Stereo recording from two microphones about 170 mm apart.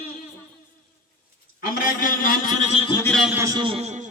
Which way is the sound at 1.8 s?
50° left (ahead or behind).